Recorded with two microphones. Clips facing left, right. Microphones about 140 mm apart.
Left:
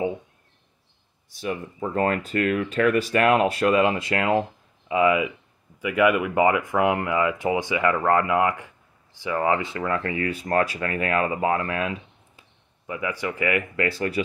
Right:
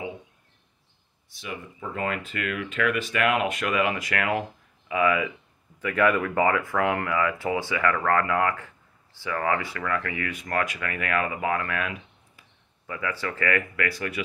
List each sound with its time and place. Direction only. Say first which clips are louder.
1.3 s speech: left 7 dB; 40° left (ahead or behind); by 5.3 s 20° left (ahead or behind)
5.8 s speech: left 2 dB; 10° left (ahead or behind); by 14.2 s 30° left (ahead or behind)